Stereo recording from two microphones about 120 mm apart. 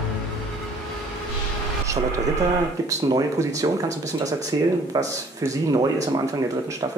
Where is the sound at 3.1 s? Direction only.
30° right (ahead or behind).